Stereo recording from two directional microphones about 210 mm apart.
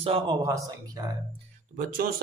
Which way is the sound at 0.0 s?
25° right (ahead or behind).